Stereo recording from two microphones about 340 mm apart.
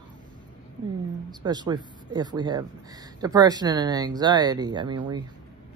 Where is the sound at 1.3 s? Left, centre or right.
Centre.